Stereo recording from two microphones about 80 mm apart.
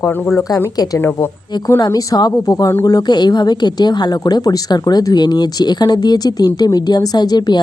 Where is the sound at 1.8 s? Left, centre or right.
Left.